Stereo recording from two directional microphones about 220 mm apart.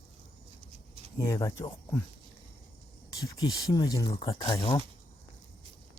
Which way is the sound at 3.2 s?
15° left (ahead or behind).